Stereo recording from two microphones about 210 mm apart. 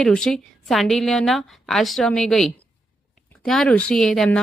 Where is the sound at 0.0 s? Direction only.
Centre (ahead or behind).